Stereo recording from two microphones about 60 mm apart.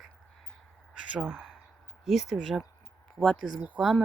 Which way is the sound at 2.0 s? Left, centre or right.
Centre.